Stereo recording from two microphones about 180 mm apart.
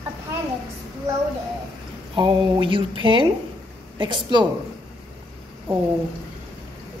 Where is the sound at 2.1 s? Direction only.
25° right (ahead or behind).